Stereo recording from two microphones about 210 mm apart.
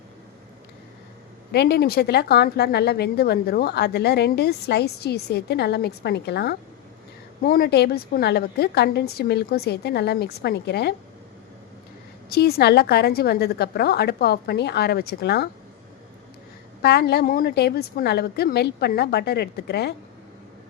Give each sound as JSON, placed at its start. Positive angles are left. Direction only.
{"t": 1.5, "sound": "a woman's voice", "side_deg": 50}
{"t": 12.3, "sound": "a woman's voice", "side_deg": 50}
{"t": 16.8, "sound": "a woman's voice", "side_deg": 50}